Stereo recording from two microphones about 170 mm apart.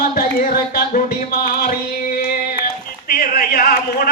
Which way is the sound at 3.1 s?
60° left (ahead or behind).